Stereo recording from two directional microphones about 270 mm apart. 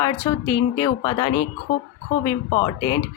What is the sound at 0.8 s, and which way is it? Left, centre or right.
Speech, centre.